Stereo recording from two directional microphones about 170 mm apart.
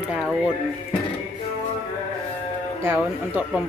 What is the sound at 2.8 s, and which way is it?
Speech, 10° right (ahead or behind).